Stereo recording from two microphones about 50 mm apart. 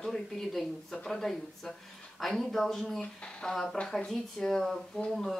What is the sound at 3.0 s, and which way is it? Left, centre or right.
Speech, centre.